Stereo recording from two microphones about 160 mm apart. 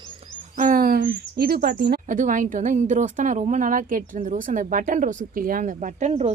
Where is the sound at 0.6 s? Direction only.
60° right (ahead or behind); by 2.0 s 90° right.